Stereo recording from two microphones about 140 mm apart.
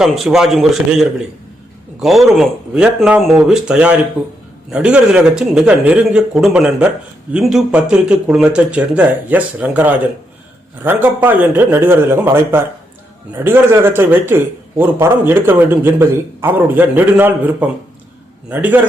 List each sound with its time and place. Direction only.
0.0 s speech: 5° right (ahead or behind)